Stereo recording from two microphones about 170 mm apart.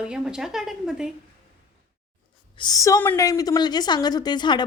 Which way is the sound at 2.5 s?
20° left (ahead or behind).